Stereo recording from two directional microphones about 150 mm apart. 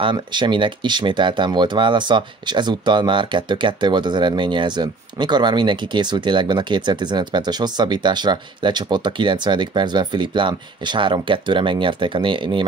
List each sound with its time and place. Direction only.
0.0 s speech: 30° right (ahead or behind)